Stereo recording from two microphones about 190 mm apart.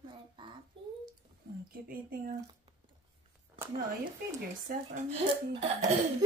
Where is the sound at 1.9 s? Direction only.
50° right (ahead or behind).